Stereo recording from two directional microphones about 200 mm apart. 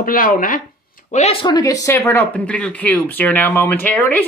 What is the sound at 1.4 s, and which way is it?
Speech, 20° left (ahead or behind).